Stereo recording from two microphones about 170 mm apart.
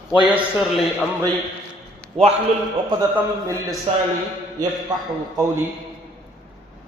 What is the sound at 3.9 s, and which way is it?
Speech, 35° right (ahead or behind).